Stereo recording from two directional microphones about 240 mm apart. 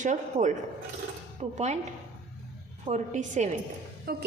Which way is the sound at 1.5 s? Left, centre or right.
Right.